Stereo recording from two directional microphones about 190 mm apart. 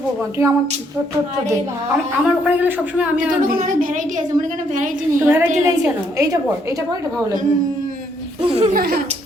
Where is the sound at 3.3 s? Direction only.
45° right (ahead or behind).